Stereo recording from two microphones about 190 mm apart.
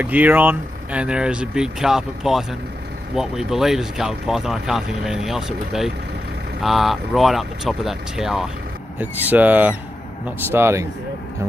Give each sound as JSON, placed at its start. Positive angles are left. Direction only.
{"t": 0.0, "sound": "speech", "side_deg": -10}